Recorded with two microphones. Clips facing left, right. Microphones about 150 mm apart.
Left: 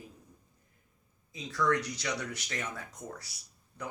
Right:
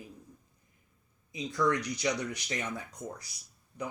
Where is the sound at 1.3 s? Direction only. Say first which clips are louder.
Right 1 dB; 15° right (ahead or behind).